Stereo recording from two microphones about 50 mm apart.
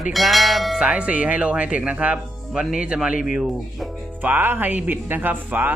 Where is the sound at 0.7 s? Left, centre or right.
Right.